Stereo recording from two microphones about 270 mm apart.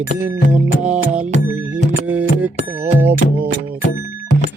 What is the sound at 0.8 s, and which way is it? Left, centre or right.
Music, centre.